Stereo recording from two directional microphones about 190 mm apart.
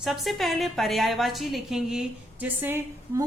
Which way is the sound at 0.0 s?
Centre (ahead or behind).